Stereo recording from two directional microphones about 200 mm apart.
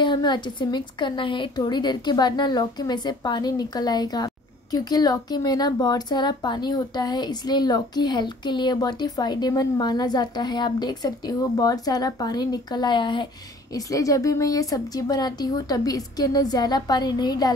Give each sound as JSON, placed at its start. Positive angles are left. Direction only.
{"t": 0.0, "sound": "a woman's voice", "side_deg": 20}